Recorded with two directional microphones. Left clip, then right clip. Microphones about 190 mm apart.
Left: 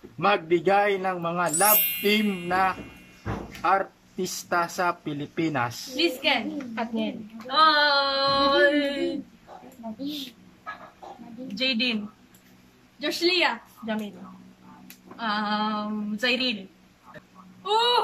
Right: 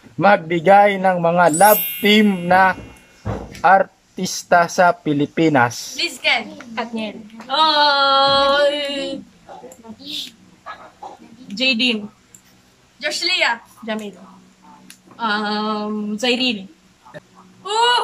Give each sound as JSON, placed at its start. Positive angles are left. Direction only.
{"t": 0.2, "sound": "speech", "side_deg": -50}
{"t": 1.5, "sound": "music", "side_deg": 0}
{"t": 2.0, "sound": "speech", "side_deg": -45}
{"t": 5.9, "sound": "speech", "side_deg": 15}
{"t": 6.7, "sound": "music", "side_deg": 0}
{"t": 7.4, "sound": "a sound", "side_deg": -15}
{"t": 11.5, "sound": "a sound", "side_deg": -15}
{"t": 13.0, "sound": "speech", "side_deg": 15}
{"t": 15.1, "sound": "a sound", "side_deg": -15}
{"t": 17.6, "sound": "speech", "side_deg": 15}